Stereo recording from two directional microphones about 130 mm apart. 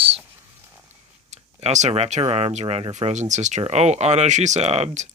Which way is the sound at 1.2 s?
60° right (ahead or behind).